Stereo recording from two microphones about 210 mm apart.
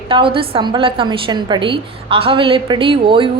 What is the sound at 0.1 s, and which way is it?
A woman's voice, 25° right (ahead or behind).